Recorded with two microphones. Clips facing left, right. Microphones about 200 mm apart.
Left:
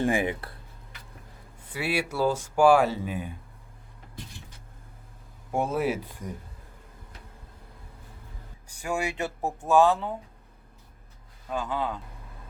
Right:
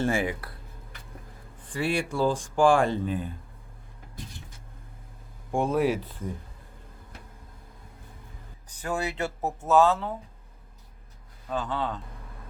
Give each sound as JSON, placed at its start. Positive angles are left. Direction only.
{"t": 0.0, "sound": "speech", "side_deg": 15}
{"t": 1.6, "sound": "speech", "side_deg": 5}
{"t": 5.5, "sound": "speech", "side_deg": 5}
{"t": 8.7, "sound": "speech", "side_deg": 10}
{"t": 11.4, "sound": "speech", "side_deg": 10}